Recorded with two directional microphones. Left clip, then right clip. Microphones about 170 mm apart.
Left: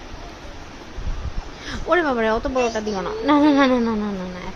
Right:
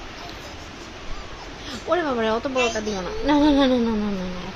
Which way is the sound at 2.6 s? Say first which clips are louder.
Right 1 dB; 20° left (ahead or behind).